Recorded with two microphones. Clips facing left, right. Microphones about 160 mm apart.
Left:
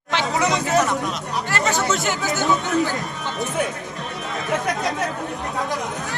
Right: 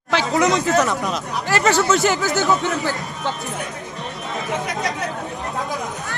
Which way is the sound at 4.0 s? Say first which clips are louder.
Right 2 dB; centre (ahead or behind).